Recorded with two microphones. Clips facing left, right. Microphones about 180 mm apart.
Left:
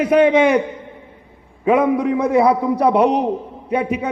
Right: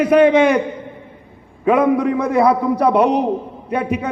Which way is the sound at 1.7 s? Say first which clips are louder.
Right 1 dB; 10° left (ahead or behind).